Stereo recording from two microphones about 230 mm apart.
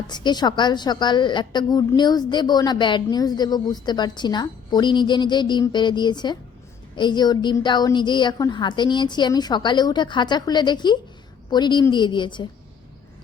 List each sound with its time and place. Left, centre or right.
0.1 s a woman's voice: centre